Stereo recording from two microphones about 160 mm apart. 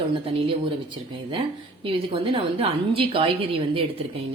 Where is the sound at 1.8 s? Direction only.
35° right (ahead or behind).